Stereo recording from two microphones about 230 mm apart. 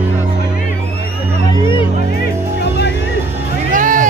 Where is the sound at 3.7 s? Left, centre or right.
Right.